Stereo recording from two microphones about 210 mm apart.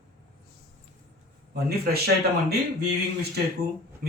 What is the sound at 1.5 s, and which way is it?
A man's voice, 50° right (ahead or behind).